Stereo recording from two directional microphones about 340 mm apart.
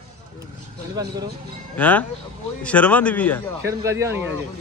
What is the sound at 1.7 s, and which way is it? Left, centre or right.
A man's voice, centre.